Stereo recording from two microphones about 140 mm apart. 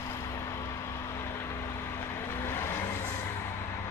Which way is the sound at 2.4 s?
20° left (ahead or behind).